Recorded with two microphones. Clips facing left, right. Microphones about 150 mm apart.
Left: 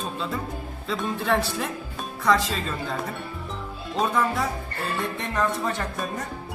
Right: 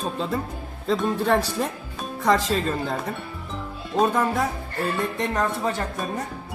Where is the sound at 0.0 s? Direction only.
45° right (ahead or behind).